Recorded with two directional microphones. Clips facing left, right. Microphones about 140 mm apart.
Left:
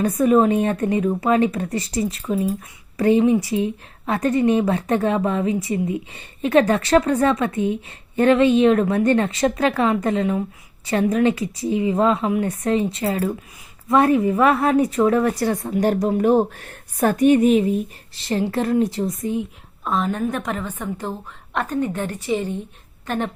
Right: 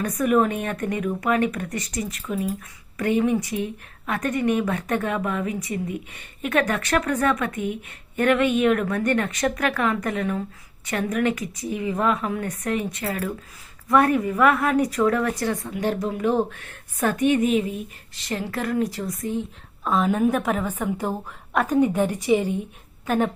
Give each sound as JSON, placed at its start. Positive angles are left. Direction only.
{"t": 0.0, "sound": "a woman's voice", "side_deg": 25}
{"t": 19.8, "sound": "a woman's voice", "side_deg": 0}